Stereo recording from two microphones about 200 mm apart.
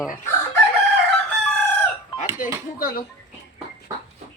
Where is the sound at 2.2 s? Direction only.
10° right (ahead or behind).